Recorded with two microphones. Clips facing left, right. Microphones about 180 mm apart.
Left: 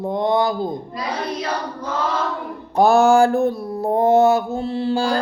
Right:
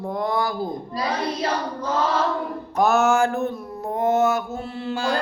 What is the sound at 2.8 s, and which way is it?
Mantra, 30° left (ahead or behind).